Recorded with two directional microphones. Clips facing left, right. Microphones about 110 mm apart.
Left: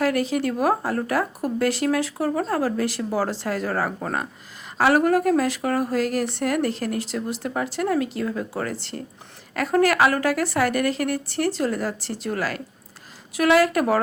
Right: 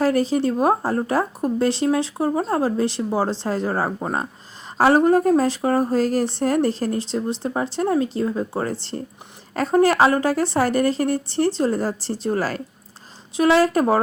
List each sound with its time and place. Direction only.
0.0 s speech: 30° right (ahead or behind)